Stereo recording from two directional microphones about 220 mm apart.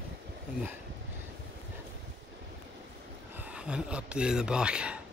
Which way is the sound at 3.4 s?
5° right (ahead or behind).